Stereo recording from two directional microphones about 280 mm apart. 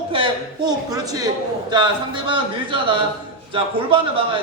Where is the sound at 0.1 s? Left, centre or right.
Centre.